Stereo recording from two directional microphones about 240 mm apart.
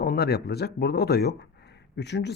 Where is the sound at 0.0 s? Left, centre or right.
Left.